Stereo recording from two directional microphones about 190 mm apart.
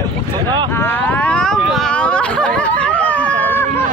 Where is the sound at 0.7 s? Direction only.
10° left (ahead or behind).